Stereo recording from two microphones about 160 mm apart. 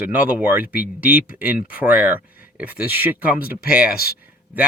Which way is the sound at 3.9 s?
70° left (ahead or behind).